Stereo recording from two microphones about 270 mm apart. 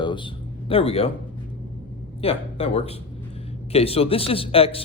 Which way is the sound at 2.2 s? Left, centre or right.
Left.